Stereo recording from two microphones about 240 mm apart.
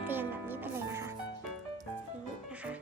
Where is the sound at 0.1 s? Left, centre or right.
Centre.